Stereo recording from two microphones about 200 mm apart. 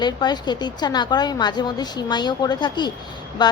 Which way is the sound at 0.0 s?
20° left (ahead or behind).